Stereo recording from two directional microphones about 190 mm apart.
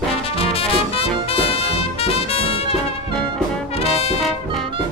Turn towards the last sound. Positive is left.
turn(degrees=30)  # may be behind; listen again after turning